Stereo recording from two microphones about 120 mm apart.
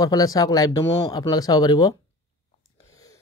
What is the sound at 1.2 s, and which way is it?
Speech, 30° left (ahead or behind).